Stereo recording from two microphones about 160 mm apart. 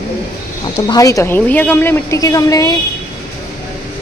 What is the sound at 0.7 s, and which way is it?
A woman's voice, 25° left (ahead or behind).